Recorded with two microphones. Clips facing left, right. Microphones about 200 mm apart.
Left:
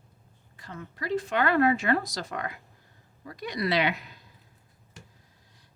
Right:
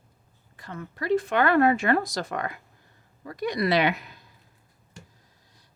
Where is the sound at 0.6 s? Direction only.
55° right (ahead or behind).